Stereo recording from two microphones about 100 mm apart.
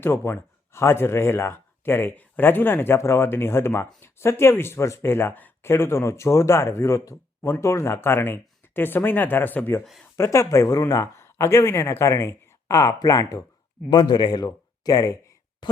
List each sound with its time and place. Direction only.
0.0 s speech: 25° left (ahead or behind)
10.2 s speech: 30° left (ahead or behind)
15.6 s speech: 50° left (ahead or behind)